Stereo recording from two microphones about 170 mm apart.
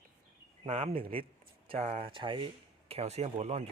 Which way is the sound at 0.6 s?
35° right (ahead or behind).